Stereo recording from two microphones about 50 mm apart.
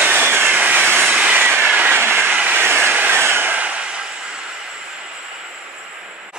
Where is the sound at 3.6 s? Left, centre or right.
Right.